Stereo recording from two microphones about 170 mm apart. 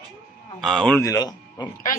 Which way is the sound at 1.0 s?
20° left (ahead or behind).